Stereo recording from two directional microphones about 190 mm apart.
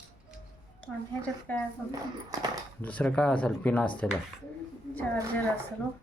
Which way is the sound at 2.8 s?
5° left (ahead or behind).